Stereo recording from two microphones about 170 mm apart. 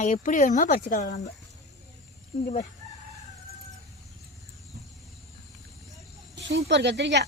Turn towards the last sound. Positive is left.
turn(degrees=-85)